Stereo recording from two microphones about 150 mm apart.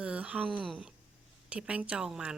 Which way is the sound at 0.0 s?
10° right (ahead or behind).